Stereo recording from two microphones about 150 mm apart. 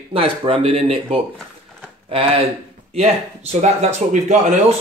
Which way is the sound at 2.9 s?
45° right (ahead or behind).